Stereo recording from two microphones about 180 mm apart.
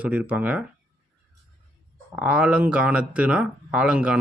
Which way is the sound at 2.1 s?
5° right (ahead or behind).